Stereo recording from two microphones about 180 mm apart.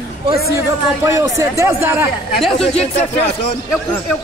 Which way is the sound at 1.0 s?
15° right (ahead or behind).